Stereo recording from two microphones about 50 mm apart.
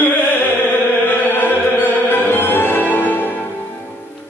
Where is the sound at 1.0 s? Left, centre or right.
Left.